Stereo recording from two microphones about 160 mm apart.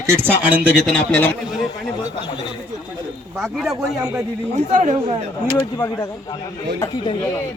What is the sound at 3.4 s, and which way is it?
Speech, centre (ahead or behind).